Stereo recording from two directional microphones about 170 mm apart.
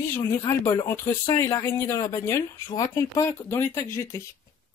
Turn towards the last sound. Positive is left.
turn(degrees=20)  # may be behind; listen again after turning